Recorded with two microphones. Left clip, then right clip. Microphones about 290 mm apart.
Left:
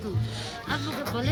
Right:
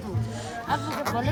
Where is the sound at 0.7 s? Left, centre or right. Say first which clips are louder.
Right 4 dB; centre.